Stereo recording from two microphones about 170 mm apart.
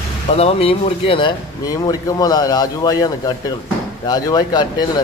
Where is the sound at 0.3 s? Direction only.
35° left (ahead or behind).